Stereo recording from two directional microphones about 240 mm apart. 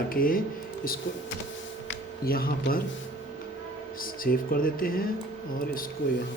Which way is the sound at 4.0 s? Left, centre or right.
Left.